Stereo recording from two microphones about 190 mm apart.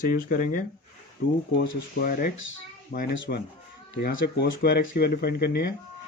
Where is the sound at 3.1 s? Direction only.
75° left (ahead or behind).